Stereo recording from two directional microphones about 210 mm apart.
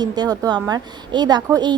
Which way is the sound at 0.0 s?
20° right (ahead or behind).